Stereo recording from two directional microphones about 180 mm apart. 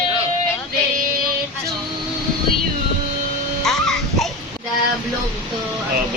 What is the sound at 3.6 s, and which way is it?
Music, centre (ahead or behind).